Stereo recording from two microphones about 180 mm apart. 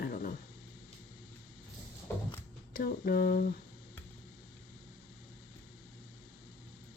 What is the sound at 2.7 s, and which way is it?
Speech, 55° left (ahead or behind).